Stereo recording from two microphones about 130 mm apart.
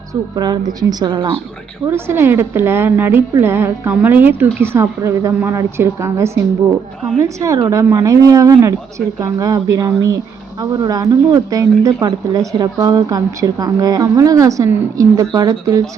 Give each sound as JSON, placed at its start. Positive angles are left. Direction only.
{"t": 0.1, "sound": "a woman's voice", "side_deg": -30}
{"t": 1.9, "sound": "speech", "side_deg": -20}